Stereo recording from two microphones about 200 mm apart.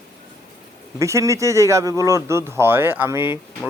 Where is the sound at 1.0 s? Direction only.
15° right (ahead or behind).